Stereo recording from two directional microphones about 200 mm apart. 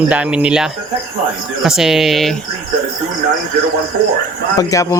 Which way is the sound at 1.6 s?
Centre (ahead or behind).